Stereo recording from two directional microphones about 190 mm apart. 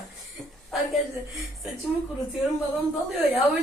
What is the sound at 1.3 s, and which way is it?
Speech, centre (ahead or behind).